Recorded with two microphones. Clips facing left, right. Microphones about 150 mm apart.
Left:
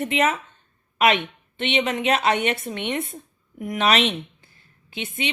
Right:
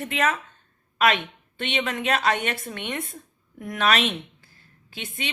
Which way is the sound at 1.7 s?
20° left (ahead or behind).